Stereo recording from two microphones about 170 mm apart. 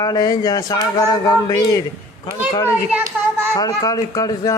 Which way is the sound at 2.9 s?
10° right (ahead or behind).